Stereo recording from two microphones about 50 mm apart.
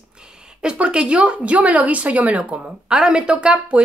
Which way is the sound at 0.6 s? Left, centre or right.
Centre.